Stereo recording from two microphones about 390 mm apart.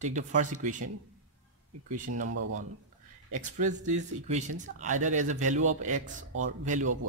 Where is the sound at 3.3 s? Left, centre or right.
Centre.